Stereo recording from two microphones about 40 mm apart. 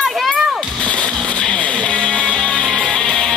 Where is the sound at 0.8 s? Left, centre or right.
Left.